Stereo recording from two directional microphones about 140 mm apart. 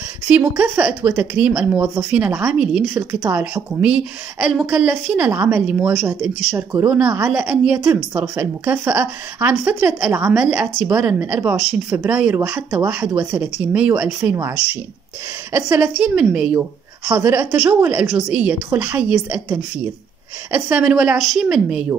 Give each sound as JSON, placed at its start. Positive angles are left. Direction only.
{"t": 0.3, "sound": "a woman's voice", "side_deg": -15}
{"t": 6.0, "sound": "speech", "side_deg": -20}
{"t": 6.9, "sound": "a woman's voice", "side_deg": -10}
{"t": 12.7, "sound": "a woman's voice", "side_deg": -5}
{"t": 15.5, "sound": "a woman's voice", "side_deg": -15}